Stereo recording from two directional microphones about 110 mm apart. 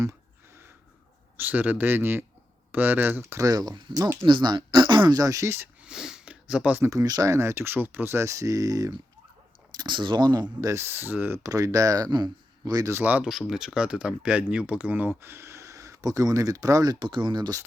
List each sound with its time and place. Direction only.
0.0 s a sound: 25° right (ahead or behind)
1.4 s a man's voice: 15° right (ahead or behind)
5.8 s sniff: 5° right (ahead or behind)
6.9 s speech: 35° right (ahead or behind)
9.7 s speech: 45° right (ahead or behind); by 11.3 s 20° right (ahead or behind)
11.4 s speech: 30° right (ahead or behind)
12.9 s a man's voice: 15° right (ahead or behind)
13.5 s speech: 5° right (ahead or behind); by 17.6 s 40° right (ahead or behind)